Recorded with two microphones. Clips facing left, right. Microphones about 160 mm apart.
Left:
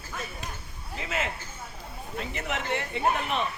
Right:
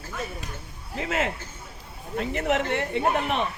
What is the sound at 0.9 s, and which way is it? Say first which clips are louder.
Speech: right 5 dB; 50° right (ahead or behind).